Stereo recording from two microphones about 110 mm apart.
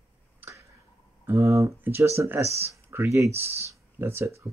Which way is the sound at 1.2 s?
25° right (ahead or behind).